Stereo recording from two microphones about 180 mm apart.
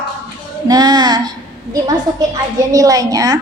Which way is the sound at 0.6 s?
20° right (ahead or behind).